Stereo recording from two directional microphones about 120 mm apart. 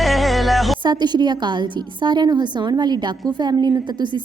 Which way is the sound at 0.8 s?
40° right (ahead or behind).